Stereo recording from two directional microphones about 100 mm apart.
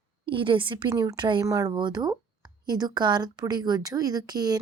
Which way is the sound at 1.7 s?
45° right (ahead or behind).